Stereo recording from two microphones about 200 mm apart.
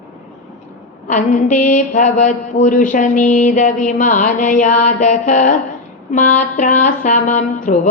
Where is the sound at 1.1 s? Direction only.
40° left (ahead or behind).